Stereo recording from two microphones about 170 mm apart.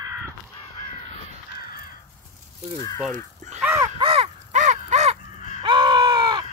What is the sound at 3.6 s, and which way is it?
Crow, 15° right (ahead or behind).